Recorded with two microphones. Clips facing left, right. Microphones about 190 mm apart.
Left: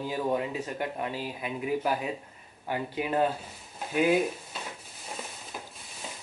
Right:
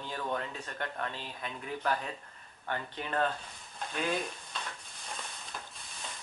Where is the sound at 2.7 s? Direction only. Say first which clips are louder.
Left 6 dB; 10° left (ahead or behind).